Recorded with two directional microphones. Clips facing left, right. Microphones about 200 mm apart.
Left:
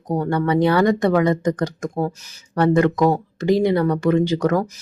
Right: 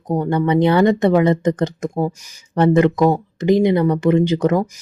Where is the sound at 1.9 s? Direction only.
10° right (ahead or behind).